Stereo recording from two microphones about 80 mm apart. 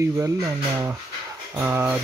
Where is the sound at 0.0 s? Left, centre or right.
Right.